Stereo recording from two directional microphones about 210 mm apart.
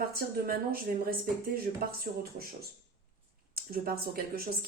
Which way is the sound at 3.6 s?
45° right (ahead or behind).